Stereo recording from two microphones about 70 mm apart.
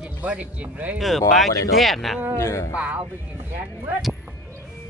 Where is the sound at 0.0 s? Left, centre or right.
Right.